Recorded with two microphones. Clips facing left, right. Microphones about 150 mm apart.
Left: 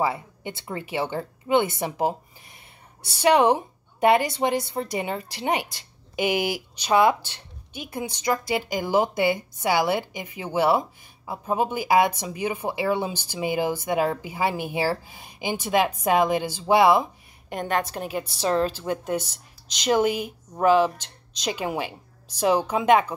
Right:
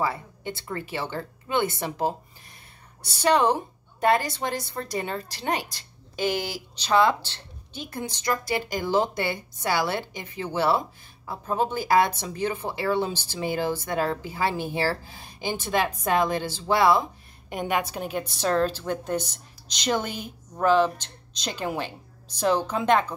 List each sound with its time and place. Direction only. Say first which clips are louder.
0.0 s speech: left 2 dB; 15° left (ahead or behind)
3.2 s speech: left 3 dB; 15° left (ahead or behind)
17.5 s a woman's voice: left 1 dB; 5° right (ahead or behind); by 23.1 s 10° left (ahead or behind)